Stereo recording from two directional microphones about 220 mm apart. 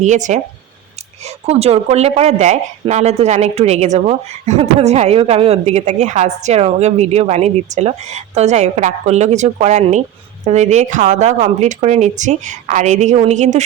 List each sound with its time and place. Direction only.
0.0 s speech: 35° right (ahead or behind)